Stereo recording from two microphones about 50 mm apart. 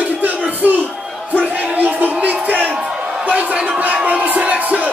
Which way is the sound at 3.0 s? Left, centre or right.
Right.